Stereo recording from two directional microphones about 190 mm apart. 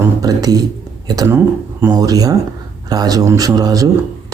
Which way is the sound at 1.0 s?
20° right (ahead or behind).